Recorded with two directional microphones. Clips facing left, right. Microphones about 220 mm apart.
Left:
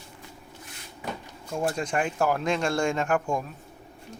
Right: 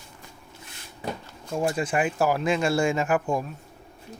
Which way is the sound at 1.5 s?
5° right (ahead or behind).